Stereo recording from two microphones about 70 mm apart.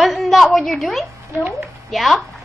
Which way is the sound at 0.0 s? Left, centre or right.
Centre.